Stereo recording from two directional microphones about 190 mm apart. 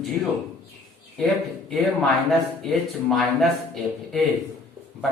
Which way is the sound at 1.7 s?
Centre (ahead or behind).